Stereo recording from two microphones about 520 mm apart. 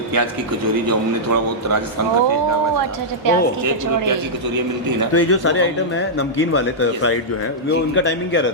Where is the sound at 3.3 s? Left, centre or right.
Right.